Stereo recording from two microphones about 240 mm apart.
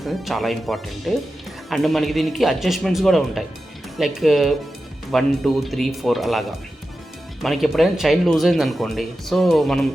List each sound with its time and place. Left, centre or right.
0.0 s speech: centre
7.4 s speech: centre